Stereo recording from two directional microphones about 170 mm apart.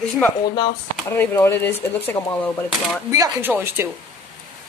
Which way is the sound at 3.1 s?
15° right (ahead or behind).